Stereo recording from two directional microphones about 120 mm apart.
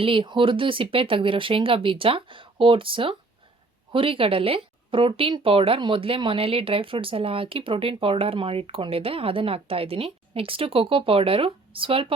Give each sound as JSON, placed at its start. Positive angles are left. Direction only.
{"t": 0.0, "sound": "speech", "side_deg": -45}